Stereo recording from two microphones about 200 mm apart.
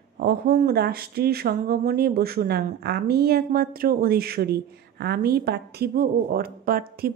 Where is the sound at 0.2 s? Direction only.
45° right (ahead or behind).